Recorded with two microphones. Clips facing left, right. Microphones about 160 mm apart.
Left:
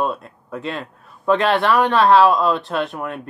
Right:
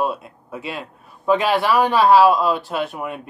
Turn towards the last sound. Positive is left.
turn(degrees=-5)  # may be behind; listen again after turning